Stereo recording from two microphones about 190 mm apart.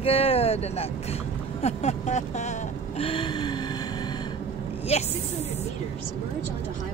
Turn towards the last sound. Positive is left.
turn(degrees=35)  # may be behind; listen again after turning